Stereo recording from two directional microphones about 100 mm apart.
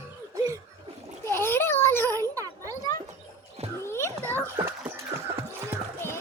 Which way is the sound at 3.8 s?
25° left (ahead or behind).